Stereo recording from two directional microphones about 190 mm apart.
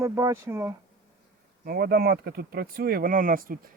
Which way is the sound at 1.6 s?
55° right (ahead or behind).